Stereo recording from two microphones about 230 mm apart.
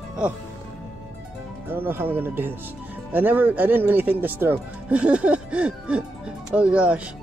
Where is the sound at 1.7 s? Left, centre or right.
Centre.